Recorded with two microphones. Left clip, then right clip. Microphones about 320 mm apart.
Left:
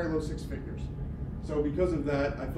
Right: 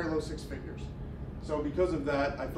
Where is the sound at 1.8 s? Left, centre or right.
Centre.